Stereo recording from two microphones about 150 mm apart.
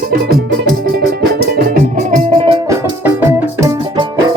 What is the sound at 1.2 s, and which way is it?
Music, 90° right.